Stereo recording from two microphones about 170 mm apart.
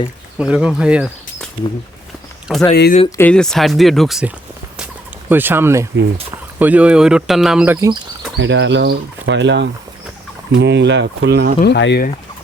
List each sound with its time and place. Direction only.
0.3 s speech: 5° right (ahead or behind)
2.5 s speech: 5° right (ahead or behind)
3.2 s speech: 5° left (ahead or behind)
5.3 s speech: 10° right (ahead or behind)
8.4 s speech: 90° right
11.6 s speech: 85° left